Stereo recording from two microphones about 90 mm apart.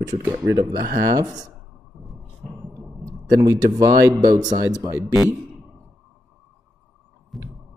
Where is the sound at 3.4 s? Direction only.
40° right (ahead or behind).